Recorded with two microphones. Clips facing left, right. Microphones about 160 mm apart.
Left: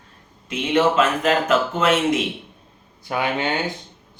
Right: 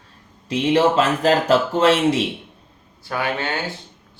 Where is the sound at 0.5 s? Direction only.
35° right (ahead or behind).